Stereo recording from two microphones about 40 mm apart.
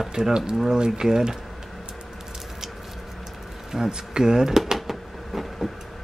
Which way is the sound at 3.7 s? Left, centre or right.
Centre.